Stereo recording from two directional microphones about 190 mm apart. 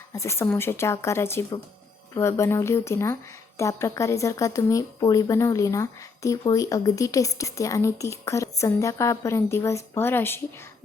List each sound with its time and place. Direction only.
0.1 s a woman's voice: 15° left (ahead or behind)